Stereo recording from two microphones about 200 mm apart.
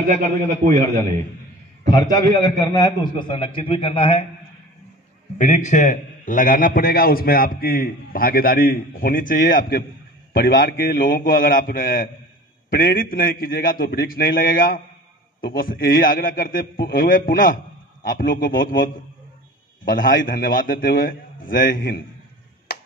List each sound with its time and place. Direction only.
1.9 s a man's voice: 20° left (ahead or behind)
5.4 s a man's voice: 35° left (ahead or behind)
19.9 s a man's voice: 45° left (ahead or behind)